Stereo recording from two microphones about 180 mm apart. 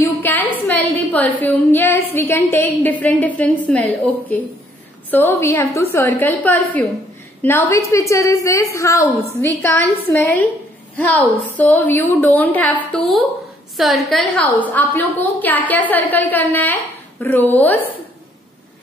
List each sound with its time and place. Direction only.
0.0 s a woman's voice: 10° left (ahead or behind)